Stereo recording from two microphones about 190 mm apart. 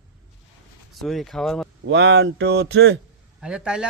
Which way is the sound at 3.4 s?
5° right (ahead or behind).